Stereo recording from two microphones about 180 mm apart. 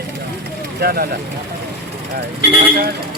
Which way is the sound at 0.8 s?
55° right (ahead or behind).